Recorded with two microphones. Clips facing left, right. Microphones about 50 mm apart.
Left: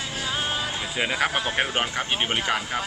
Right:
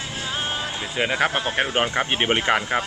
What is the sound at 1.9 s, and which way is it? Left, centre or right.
Speech, right.